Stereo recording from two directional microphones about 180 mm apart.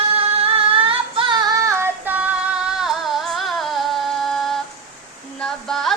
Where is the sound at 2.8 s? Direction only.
Centre (ahead or behind).